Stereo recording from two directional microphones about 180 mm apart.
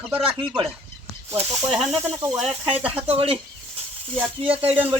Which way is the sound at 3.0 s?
30° right (ahead or behind).